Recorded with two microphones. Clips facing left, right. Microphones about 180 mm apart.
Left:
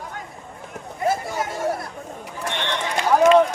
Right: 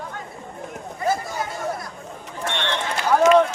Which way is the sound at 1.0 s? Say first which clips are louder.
Left 1 dB; 30° left (ahead or behind).